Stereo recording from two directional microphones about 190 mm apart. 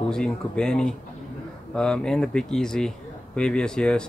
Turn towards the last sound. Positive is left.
turn(degrees=5)  # may be behind; listen again after turning